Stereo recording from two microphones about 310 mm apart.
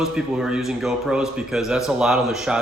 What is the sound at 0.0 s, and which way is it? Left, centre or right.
Speech, centre.